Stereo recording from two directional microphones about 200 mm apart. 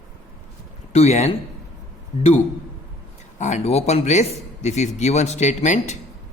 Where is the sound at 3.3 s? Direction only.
35° left (ahead or behind).